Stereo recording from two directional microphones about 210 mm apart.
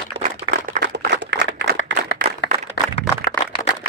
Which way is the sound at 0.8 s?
55° right (ahead or behind).